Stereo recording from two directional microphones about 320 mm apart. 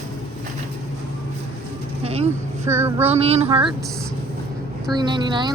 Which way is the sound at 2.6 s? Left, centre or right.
Centre.